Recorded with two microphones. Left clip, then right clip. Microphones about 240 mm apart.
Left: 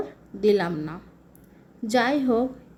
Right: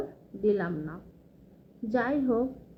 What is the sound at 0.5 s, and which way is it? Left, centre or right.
Speech, left.